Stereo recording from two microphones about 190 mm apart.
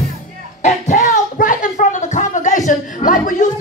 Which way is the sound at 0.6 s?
40° left (ahead or behind).